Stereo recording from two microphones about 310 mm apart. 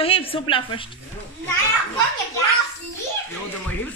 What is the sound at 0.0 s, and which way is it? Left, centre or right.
Speech, centre.